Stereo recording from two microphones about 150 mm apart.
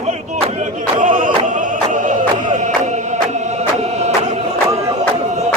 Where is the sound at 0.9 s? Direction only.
60° right (ahead or behind).